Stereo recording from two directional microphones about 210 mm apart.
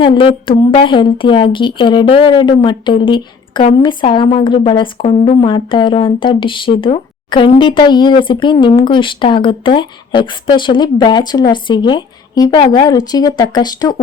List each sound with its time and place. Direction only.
0.0 s speech: 25° left (ahead or behind)